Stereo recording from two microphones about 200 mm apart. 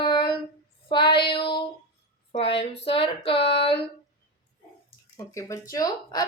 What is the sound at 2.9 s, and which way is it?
Female singing, 25° left (ahead or behind).